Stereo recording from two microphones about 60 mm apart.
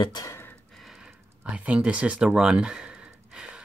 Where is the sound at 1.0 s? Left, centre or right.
Centre.